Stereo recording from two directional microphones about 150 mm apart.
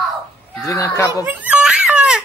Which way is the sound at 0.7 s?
20° left (ahead or behind).